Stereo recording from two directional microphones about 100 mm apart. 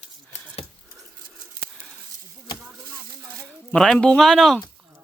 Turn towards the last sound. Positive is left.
turn(degrees=5)  # may be behind; listen again after turning